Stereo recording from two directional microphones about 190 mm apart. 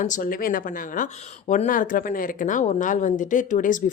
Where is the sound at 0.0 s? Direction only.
45° left (ahead or behind).